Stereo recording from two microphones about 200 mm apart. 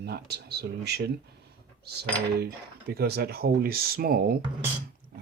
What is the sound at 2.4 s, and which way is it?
Speech, 50° right (ahead or behind).